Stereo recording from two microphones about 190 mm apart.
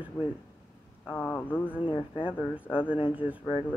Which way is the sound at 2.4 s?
5° right (ahead or behind).